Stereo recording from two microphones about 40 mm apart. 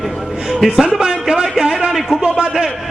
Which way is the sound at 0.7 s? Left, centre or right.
Centre.